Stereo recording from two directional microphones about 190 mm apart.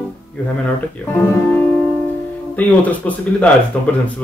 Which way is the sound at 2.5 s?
10° left (ahead or behind).